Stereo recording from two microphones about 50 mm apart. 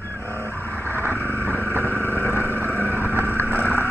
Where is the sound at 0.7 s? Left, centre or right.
Left.